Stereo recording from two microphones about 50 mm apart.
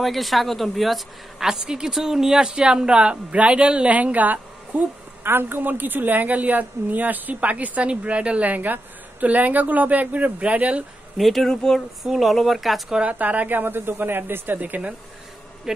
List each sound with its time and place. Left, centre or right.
0.0 s a woman's voice: centre; by 4.8 s right
5.2 s a woman's voice: right
8.5 s a woman's voice: right
11.1 s speech: centre
13.1 s a woman's voice: right